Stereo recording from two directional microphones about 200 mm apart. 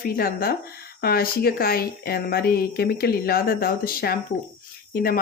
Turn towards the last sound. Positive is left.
turn(degrees=50)  # may be behind; listen again after turning